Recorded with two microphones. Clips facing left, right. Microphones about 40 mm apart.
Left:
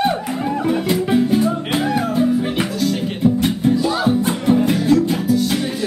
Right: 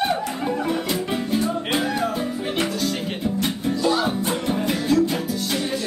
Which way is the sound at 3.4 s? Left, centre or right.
Centre.